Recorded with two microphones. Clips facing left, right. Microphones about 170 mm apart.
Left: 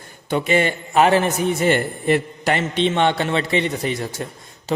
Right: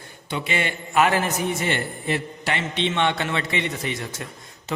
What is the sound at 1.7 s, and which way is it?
A man's voice, 50° left (ahead or behind).